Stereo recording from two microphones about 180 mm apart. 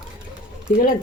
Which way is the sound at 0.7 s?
45° left (ahead or behind).